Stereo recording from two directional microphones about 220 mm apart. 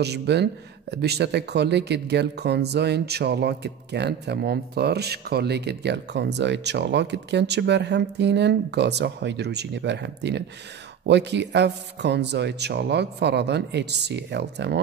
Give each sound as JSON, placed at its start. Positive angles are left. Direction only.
{"t": 0.0, "sound": "speech", "side_deg": -50}